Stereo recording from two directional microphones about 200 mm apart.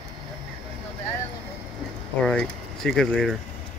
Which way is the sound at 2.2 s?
5° left (ahead or behind).